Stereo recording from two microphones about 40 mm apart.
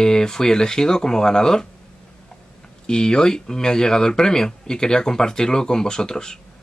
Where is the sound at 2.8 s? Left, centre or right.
Left.